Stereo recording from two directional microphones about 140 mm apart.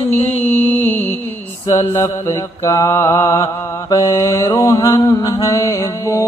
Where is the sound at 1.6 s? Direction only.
20° left (ahead or behind).